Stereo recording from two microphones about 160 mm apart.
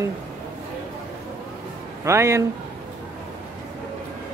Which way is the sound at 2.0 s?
15° right (ahead or behind).